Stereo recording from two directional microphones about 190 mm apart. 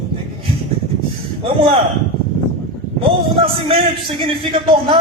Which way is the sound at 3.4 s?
30° right (ahead or behind).